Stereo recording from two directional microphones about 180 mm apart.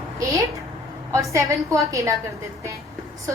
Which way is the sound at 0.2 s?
20° right (ahead or behind).